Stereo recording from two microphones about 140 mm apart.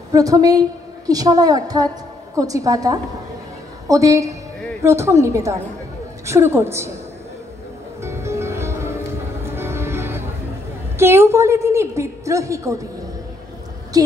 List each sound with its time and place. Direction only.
0.1 s a woman's voice: 25° right (ahead or behind)
8.0 s music: 20° right (ahead or behind)
11.0 s a woman's voice: 15° right (ahead or behind)
13.9 s a woman's voice: 25° right (ahead or behind)